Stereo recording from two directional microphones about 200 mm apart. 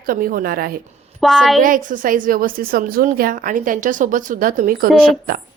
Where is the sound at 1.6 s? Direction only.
40° right (ahead or behind).